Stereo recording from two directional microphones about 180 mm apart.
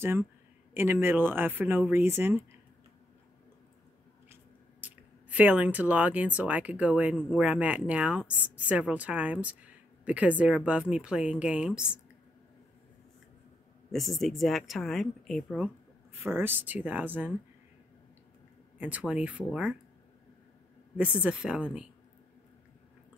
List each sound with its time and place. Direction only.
0.0 s speech: 10° right (ahead or behind)
4.3 s speech: 10° right (ahead or behind)
13.9 s speech: centre (ahead or behind)
18.8 s speech: 10° right (ahead or behind)
20.9 s speech: 5° right (ahead or behind)